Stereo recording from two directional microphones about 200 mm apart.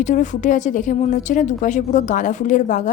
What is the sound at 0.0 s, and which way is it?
A woman's voice, 40° left (ahead or behind).